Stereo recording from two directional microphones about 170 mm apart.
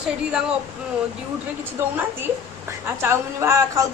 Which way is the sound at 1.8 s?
15° right (ahead or behind).